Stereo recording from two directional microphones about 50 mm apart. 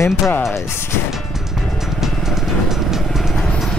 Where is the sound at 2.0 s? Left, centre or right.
Centre.